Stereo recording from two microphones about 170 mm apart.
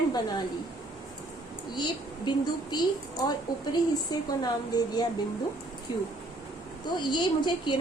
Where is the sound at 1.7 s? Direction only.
25° left (ahead or behind).